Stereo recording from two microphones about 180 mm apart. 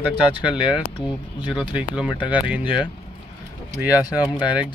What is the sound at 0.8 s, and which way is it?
Speech, 25° left (ahead or behind).